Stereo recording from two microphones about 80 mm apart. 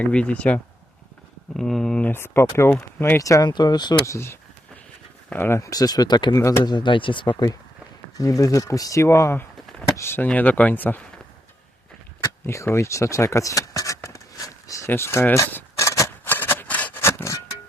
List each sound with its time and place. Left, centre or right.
0.0 s speech: centre
1.5 s speech: centre
2.0 s speech: left
3.4 s speech: left
4.0 s speech: left
5.5 s speech: left
6.3 s speech: left
6.7 s speech: left
8.2 s speech: left
12.2 s a sound: left
14.8 s a sound: left
17.0 s music: left